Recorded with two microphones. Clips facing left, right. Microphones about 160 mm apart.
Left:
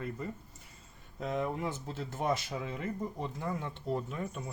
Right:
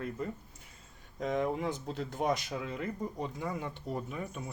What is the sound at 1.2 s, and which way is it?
Speech, 5° left (ahead or behind).